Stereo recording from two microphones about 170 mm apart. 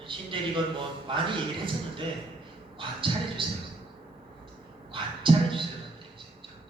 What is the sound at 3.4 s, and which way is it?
Speech, 30° right (ahead or behind).